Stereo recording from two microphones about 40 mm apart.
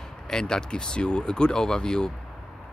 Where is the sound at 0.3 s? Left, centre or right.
Centre.